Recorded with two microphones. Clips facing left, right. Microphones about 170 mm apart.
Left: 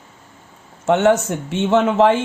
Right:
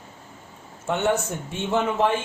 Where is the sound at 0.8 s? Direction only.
90° left.